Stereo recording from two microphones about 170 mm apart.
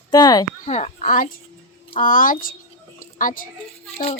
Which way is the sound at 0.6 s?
40° left (ahead or behind).